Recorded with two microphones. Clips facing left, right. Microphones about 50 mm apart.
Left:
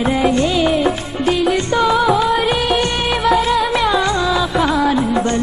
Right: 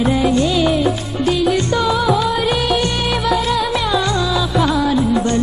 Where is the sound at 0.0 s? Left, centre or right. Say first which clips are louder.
Even; left.